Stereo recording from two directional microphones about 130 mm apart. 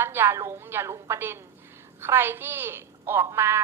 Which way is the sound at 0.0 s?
15° right (ahead or behind).